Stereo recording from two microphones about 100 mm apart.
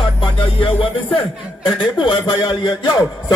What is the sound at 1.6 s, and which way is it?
A man's voice, 50° left (ahead or behind).